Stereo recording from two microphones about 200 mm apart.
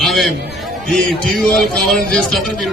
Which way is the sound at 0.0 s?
Centre (ahead or behind).